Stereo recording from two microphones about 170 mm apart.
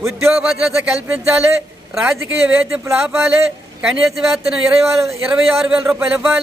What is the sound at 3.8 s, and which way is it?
A man's voice, centre (ahead or behind).